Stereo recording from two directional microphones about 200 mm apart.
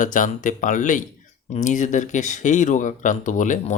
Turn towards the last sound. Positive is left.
turn(degrees=40)  # may be behind; listen again after turning